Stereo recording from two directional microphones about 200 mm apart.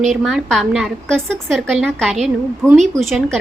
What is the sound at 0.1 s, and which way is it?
A woman's voice, centre (ahead or behind).